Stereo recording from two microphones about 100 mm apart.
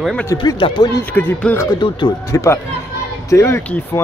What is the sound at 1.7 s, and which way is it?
Speech, 55° left (ahead or behind).